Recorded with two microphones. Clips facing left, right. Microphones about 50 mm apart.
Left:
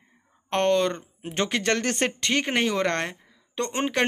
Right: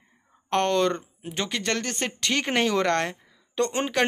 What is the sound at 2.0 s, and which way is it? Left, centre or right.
Speech, left.